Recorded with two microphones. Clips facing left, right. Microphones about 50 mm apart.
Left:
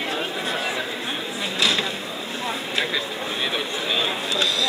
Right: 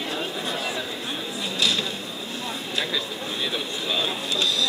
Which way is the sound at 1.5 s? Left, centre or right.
Left.